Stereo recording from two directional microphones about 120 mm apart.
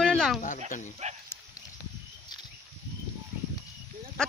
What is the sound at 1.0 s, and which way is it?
Speech, 70° right (ahead or behind).